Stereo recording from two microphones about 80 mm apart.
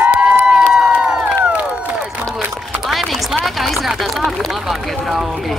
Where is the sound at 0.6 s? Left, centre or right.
Centre.